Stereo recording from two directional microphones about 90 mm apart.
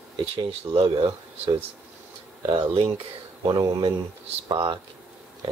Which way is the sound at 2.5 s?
90° right.